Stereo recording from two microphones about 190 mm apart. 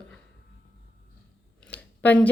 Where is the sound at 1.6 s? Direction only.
10° left (ahead or behind).